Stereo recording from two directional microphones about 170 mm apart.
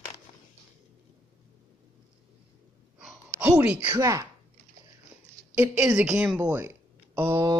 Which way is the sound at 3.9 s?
20° right (ahead or behind).